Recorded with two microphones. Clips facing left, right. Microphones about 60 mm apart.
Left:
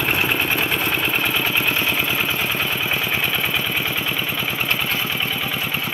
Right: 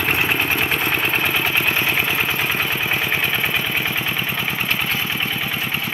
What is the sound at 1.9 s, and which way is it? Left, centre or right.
Vehicle, centre.